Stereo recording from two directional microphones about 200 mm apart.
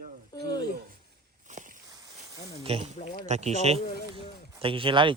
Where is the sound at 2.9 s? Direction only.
35° left (ahead or behind).